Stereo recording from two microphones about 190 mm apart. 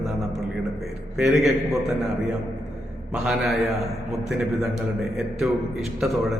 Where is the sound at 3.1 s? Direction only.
Centre (ahead or behind).